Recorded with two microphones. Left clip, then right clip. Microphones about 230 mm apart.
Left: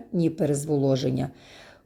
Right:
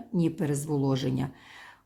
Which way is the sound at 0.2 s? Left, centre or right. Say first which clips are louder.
Left 5 dB; centre.